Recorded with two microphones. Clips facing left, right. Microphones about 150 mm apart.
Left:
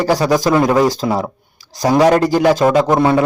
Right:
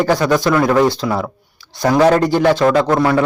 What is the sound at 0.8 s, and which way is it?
Speech, 40° left (ahead or behind).